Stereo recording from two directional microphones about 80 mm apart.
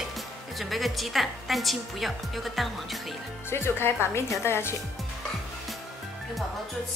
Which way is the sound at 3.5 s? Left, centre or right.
Left.